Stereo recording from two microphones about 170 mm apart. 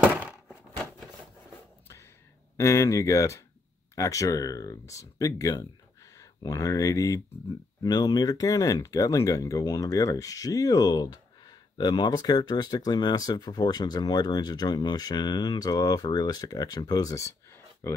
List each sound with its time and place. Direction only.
2.5 s speech: 15° left (ahead or behind)